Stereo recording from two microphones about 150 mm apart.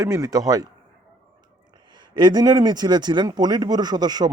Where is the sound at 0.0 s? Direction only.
20° right (ahead or behind).